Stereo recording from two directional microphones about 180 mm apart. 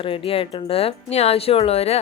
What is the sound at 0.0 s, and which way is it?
Speech, 30° left (ahead or behind).